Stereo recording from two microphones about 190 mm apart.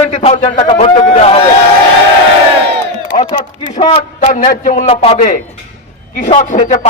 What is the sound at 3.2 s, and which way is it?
A man's voice, 25° left (ahead or behind).